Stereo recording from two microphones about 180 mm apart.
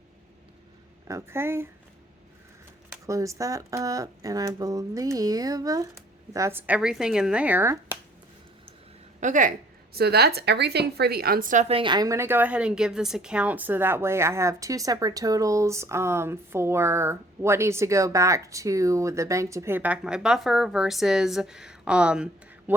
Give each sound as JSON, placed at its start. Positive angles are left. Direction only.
{"t": 1.0, "sound": "a woman's voice", "side_deg": -15}
{"t": 3.1, "sound": "a woman's voice", "side_deg": -20}
{"t": 9.2, "sound": "a woman's voice", "side_deg": -45}
{"t": 9.9, "sound": "a woman's voice", "side_deg": -60}